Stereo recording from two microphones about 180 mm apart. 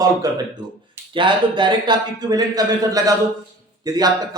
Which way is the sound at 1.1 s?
25° right (ahead or behind).